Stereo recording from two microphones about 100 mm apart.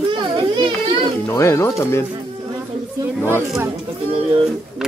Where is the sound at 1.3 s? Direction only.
25° left (ahead or behind).